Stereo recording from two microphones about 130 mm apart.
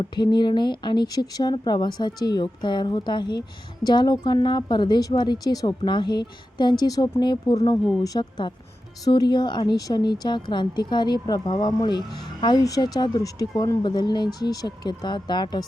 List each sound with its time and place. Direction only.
0.0 s speech: 35° left (ahead or behind)